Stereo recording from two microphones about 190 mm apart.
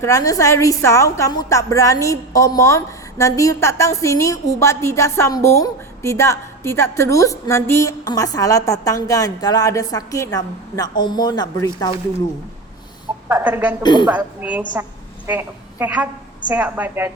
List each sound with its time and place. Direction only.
0.0 s a woman's voice: 15° left (ahead or behind)
13.2 s a woman's voice: 10° right (ahead or behind)
13.8 s a woman's voice: 25° left (ahead or behind)
14.1 s a woman's voice: 10° right (ahead or behind)